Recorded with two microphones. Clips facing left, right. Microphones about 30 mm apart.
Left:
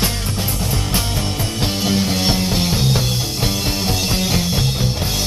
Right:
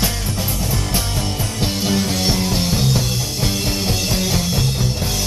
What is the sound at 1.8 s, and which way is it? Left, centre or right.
Music, centre.